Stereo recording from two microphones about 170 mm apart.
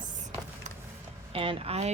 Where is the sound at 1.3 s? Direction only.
35° right (ahead or behind).